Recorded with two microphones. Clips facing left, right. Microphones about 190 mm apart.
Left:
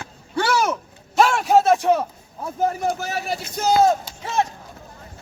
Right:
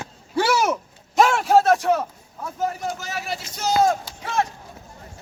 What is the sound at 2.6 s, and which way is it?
Speech, 60° left (ahead or behind).